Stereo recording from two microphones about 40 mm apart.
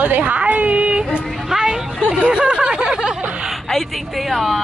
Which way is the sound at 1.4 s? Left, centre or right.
Centre.